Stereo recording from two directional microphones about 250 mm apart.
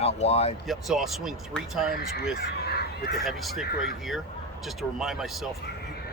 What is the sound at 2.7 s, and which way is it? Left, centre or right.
Crow, left.